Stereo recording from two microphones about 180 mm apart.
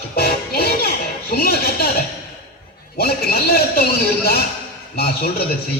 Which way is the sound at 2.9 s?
60° left (ahead or behind).